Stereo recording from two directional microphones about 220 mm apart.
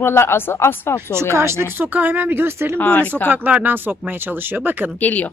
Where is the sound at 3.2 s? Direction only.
10° right (ahead or behind).